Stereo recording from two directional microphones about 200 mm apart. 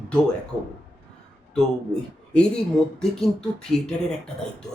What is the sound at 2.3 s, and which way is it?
Speech, 5° left (ahead or behind).